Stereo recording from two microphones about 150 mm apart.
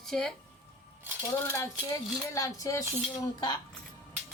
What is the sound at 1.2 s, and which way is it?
Speech, 20° left (ahead or behind).